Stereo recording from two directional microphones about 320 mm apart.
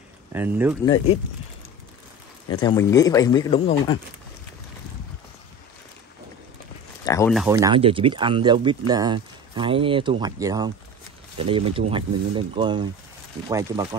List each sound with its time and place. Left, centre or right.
0.3 s speech: centre
0.8 s speech: centre
2.5 s speech: centre
7.1 s speech: centre
7.3 s speech: centre